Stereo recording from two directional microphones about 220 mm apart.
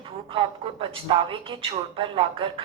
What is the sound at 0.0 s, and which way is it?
Speech, 25° right (ahead or behind).